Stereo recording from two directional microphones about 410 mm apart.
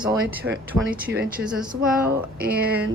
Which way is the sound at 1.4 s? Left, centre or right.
Centre.